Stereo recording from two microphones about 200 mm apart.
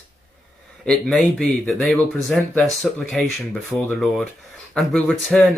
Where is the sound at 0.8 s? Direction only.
Centre (ahead or behind).